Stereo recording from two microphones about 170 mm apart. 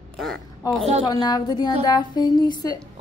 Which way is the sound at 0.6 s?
20° left (ahead or behind).